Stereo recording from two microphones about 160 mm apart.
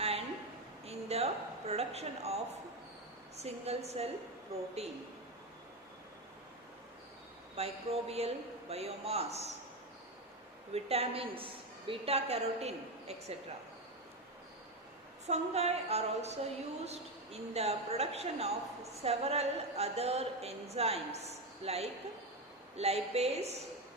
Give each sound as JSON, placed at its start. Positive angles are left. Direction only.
{"t": 0.9, "sound": "a sound", "side_deg": -40}
{"t": 3.3, "sound": "a woman's voice", "side_deg": -40}
{"t": 7.5, "sound": "a woman's voice", "side_deg": -40}
{"t": 10.8, "sound": "a woman's voice", "side_deg": -40}
{"t": 15.3, "sound": "a woman's voice", "side_deg": -40}